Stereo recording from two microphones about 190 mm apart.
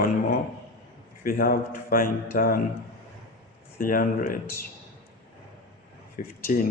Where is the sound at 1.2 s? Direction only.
50° left (ahead or behind).